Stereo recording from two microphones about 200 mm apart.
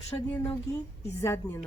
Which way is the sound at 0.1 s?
15° left (ahead or behind).